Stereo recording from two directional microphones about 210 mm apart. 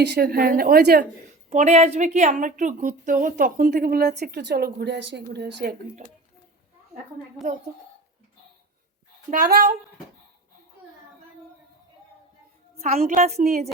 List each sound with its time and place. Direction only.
0.0 s a woman's voice: 50° right (ahead or behind)
1.5 s a woman's voice: 30° right (ahead or behind); by 5.7 s 50° right (ahead or behind)
9.3 s a woman's voice: 45° right (ahead or behind)
13.0 s a woman's voice: 35° right (ahead or behind)